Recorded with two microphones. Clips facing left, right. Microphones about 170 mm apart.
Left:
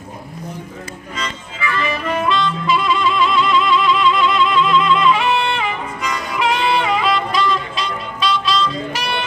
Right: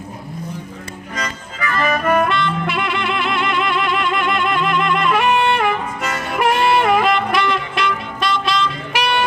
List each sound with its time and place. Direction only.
1.1 s harmonica: 50° right (ahead or behind)